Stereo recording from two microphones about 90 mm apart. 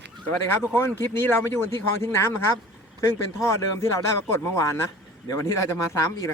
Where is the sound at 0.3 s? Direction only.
25° left (ahead or behind).